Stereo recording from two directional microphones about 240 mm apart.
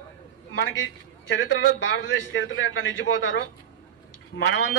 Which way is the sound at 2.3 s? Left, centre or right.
Left.